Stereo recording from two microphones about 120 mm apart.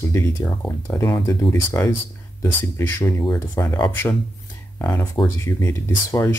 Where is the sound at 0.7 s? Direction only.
20° left (ahead or behind).